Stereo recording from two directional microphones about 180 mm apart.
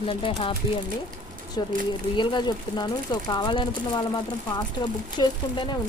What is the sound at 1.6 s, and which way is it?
Speech, 25° left (ahead or behind).